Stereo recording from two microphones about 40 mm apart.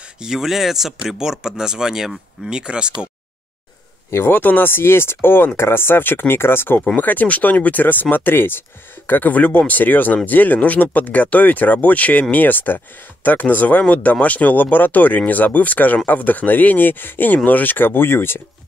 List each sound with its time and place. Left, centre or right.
0.2 s speech: centre
4.3 s speech: left
5.6 s speech: left
7.0 s speech: left